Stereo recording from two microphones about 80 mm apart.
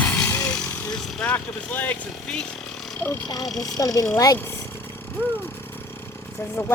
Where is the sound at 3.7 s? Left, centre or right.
Left.